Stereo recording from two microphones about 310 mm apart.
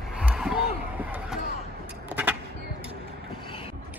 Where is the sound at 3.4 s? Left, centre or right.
Centre.